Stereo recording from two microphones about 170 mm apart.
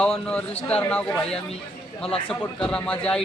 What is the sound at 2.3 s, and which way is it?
Speech, 5° left (ahead or behind).